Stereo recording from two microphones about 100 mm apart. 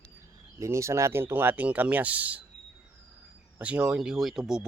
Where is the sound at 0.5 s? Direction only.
30° right (ahead or behind).